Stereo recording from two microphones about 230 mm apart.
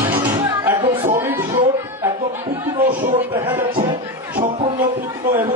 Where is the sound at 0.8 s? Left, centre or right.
Right.